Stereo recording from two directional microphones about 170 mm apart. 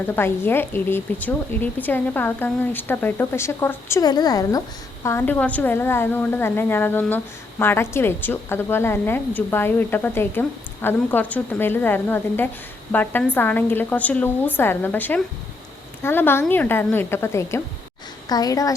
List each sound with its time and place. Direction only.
0.2 s a woman's voice: 15° left (ahead or behind)